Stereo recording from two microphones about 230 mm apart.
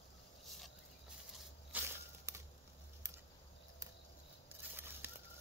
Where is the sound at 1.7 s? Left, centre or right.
Centre.